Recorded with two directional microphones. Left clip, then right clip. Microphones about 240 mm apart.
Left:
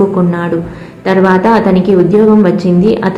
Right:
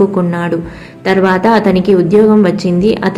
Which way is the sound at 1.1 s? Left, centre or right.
Right.